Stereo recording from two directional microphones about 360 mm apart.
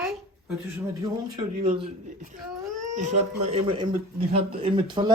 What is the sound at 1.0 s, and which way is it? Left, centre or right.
Speech, centre.